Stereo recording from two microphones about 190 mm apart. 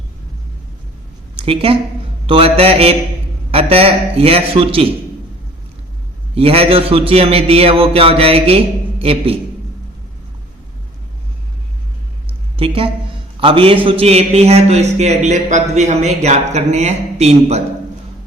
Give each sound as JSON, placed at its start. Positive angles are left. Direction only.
{"t": 1.4, "sound": "a woman's voice", "side_deg": -30}
{"t": 6.3, "sound": "a man's voice", "side_deg": -30}
{"t": 12.5, "sound": "a woman's voice", "side_deg": -30}